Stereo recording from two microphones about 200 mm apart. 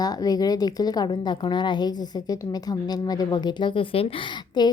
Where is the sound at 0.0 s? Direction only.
20° left (ahead or behind).